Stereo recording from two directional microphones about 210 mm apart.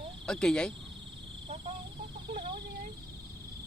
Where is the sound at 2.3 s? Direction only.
25° right (ahead or behind).